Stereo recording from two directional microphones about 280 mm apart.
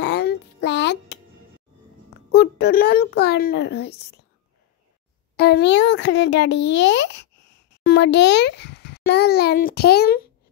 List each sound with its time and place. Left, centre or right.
0.0 s music: left
2.3 s a child's voice: left
5.3 s a child's voice: left